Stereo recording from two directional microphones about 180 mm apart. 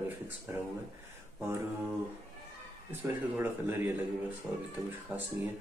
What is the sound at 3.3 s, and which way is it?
Speech, 10° right (ahead or behind).